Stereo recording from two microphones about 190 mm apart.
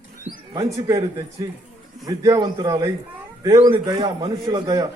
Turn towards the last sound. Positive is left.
turn(degrees=-20)  # may be behind; listen again after turning